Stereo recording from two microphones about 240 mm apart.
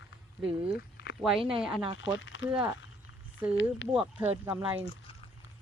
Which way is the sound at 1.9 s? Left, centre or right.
Left.